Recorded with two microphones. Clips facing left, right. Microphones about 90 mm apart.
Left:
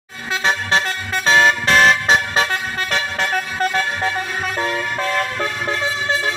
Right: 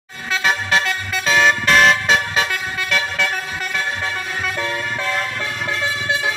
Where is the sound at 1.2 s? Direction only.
30° left (ahead or behind).